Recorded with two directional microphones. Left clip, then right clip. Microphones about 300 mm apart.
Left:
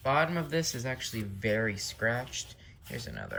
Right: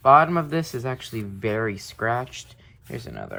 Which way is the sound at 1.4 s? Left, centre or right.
Right.